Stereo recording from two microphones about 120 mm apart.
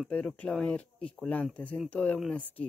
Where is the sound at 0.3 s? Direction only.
5° left (ahead or behind).